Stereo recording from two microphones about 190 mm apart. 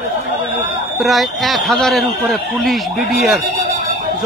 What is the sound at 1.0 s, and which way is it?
A man's voice, centre (ahead or behind).